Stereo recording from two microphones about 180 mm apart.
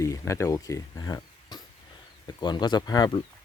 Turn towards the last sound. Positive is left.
turn(degrees=20)  # may be behind; listen again after turning